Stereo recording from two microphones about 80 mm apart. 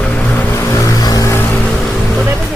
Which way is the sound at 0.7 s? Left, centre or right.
Left.